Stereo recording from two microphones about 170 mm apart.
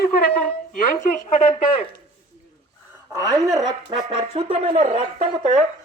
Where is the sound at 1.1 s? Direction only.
40° left (ahead or behind).